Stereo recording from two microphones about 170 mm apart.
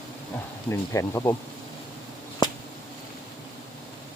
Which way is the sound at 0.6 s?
15° left (ahead or behind).